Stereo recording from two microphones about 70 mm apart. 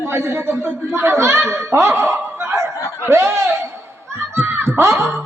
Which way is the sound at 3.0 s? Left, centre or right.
Right.